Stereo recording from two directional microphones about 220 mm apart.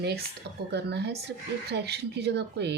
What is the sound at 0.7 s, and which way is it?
Speech, 50° right (ahead or behind).